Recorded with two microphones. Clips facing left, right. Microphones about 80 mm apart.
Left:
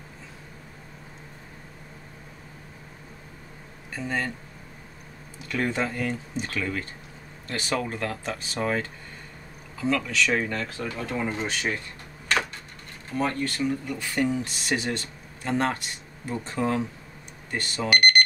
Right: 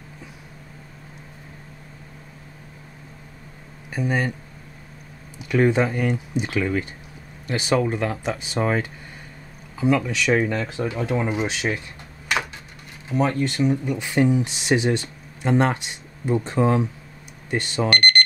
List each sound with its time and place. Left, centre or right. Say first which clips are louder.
3.9 s speech: right 5 dB; centre
5.5 s speech: right 8 dB; centre
13.1 s speech: right 5 dB; centre
17.8 s speech: even; centre